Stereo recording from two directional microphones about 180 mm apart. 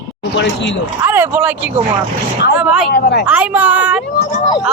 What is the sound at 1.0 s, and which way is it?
A woman's voice, 15° right (ahead or behind).